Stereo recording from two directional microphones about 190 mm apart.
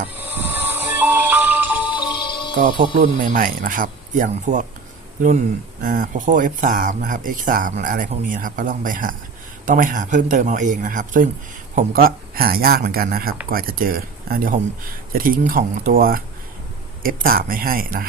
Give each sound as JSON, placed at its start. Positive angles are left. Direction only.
{"t": 0.2, "sound": "music", "side_deg": -10}
{"t": 2.2, "sound": "music", "side_deg": 25}
{"t": 2.6, "sound": "speech", "side_deg": -50}
{"t": 5.8, "sound": "speech", "side_deg": -45}